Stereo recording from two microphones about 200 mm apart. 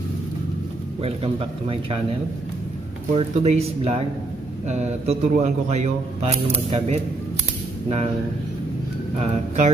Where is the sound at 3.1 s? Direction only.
30° right (ahead or behind).